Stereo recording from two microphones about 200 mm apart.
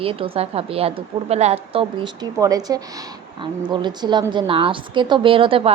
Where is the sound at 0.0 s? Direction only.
30° right (ahead or behind).